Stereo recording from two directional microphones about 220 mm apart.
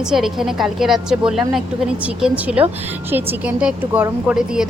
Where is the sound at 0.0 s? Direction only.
Centre (ahead or behind).